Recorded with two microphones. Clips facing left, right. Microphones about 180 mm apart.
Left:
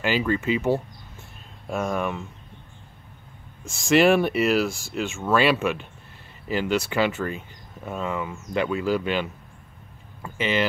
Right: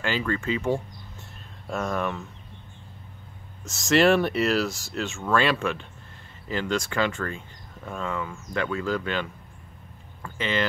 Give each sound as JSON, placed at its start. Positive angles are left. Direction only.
{"t": 0.0, "sound": "speech", "side_deg": 15}
{"t": 3.6, "sound": "speech", "side_deg": 0}